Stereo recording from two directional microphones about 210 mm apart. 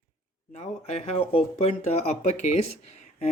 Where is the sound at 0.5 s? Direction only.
30° left (ahead or behind).